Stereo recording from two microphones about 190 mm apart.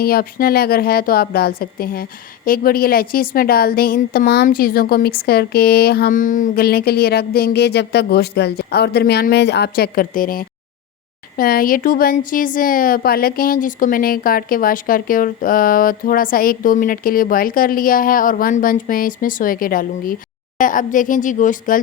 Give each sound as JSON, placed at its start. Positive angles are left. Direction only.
{"t": 0.0, "sound": "a woman's voice", "side_deg": 50}